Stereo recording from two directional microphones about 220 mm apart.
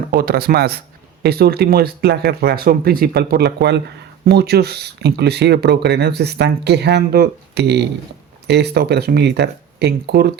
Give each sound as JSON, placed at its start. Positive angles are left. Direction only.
{"t": 0.1, "sound": "speech", "side_deg": -45}